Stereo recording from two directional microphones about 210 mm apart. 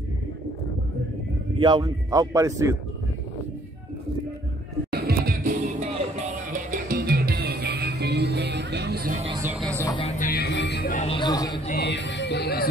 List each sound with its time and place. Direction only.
1.6 s speech: 20° right (ahead or behind)
4.9 s music: 45° right (ahead or behind)
5.8 s music: 35° right (ahead or behind)
9.8 s a sound: 25° left (ahead or behind)
10.1 s music: 45° left (ahead or behind)
11.0 s music: 25° left (ahead or behind)
11.6 s music: 45° left (ahead or behind)